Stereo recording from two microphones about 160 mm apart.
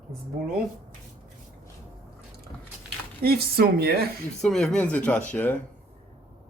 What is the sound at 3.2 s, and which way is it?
Speech, 75° right (ahead or behind).